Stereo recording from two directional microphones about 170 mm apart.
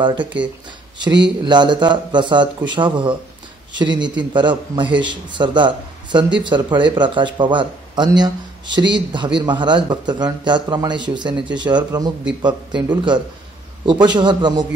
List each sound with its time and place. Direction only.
0.0 s a man's voice: 25° right (ahead or behind)
1.4 s a man's voice: 25° right (ahead or behind)